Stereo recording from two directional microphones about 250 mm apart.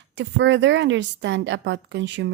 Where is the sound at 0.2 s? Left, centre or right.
Right.